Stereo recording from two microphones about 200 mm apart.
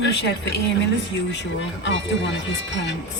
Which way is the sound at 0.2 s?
60° left (ahead or behind).